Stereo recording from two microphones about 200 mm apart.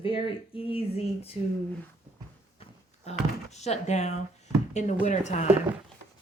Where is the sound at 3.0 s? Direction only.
35° left (ahead or behind).